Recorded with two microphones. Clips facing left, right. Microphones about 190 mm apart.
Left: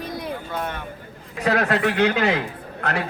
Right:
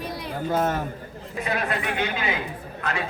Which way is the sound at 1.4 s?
75° left (ahead or behind).